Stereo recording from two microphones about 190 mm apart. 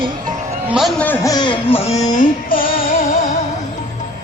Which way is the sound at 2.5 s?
50° left (ahead or behind).